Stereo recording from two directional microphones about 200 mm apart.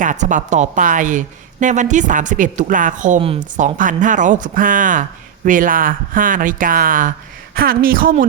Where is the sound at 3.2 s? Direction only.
25° right (ahead or behind).